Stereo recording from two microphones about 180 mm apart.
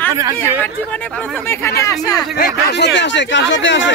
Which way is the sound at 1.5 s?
15° left (ahead or behind).